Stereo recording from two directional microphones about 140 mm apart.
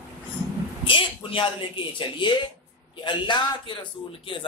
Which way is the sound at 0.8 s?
40° left (ahead or behind).